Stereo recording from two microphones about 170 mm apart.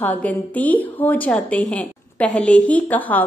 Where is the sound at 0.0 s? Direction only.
10° left (ahead or behind).